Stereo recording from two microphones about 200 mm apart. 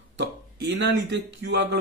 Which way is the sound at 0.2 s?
60° right (ahead or behind).